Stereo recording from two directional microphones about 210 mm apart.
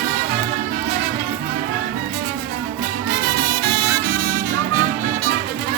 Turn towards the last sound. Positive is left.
turn(degrees=-40)  # may be behind; listen again after turning